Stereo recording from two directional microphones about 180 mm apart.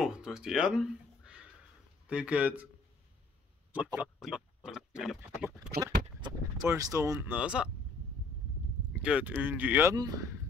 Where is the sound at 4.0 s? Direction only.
Centre (ahead or behind).